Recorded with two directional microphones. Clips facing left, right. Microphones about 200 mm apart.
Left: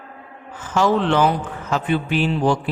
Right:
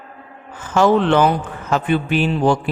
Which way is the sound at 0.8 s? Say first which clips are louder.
Right 3 dB; 55° right (ahead or behind).